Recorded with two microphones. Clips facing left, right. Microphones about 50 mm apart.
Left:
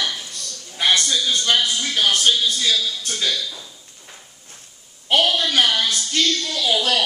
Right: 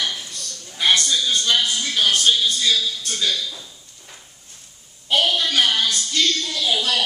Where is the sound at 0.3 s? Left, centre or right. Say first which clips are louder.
Even; left.